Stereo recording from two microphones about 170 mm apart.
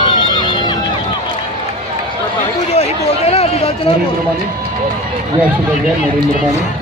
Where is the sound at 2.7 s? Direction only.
40° left (ahead or behind).